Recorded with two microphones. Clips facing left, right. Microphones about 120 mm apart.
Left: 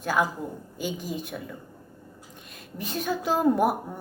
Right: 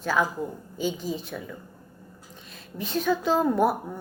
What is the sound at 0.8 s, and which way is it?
Speech, 10° left (ahead or behind).